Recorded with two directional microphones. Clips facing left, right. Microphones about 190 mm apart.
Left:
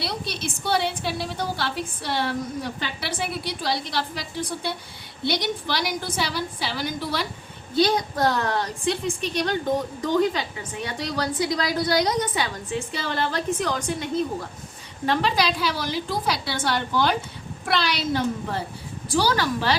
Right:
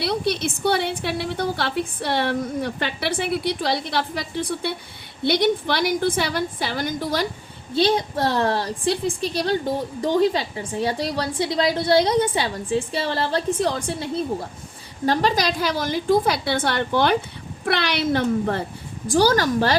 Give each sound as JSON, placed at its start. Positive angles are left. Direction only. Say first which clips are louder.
{"t": 0.0, "sound": "a woman's voice", "louder": "right 7 dB", "side_deg": -60}
{"t": 7.8, "sound": "a woman's voice", "louder": "right 1 dB", "side_deg": -30}
{"t": 19.0, "sound": "a woman's voice", "louder": "right 5 dB", "side_deg": -45}